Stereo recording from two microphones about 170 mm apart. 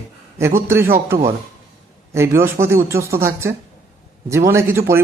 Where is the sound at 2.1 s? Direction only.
15° right (ahead or behind).